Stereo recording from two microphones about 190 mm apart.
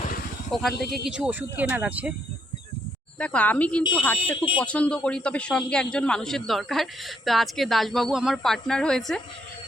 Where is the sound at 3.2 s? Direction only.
5° left (ahead or behind).